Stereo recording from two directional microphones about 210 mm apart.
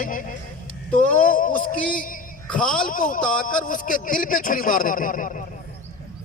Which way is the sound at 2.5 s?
5° left (ahead or behind).